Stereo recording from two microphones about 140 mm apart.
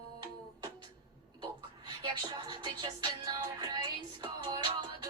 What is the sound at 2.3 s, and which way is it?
Music, 35° right (ahead or behind).